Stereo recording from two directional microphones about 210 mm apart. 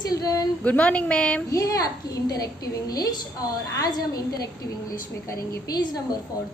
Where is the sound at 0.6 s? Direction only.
5° left (ahead or behind).